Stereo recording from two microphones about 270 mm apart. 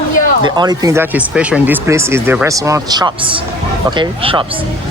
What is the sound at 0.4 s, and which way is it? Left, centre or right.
Speech, centre.